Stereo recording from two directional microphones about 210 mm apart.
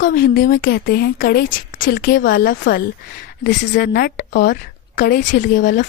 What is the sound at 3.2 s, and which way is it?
A woman's voice, 55° left (ahead or behind).